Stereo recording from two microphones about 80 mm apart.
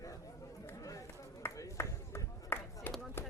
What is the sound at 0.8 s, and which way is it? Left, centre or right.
Run, left.